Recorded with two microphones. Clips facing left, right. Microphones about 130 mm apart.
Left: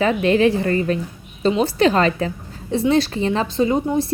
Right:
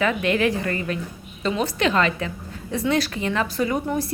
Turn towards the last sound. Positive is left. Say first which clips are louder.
# left 5 dB
turn(degrees=25)  # may be behind; listen again after turning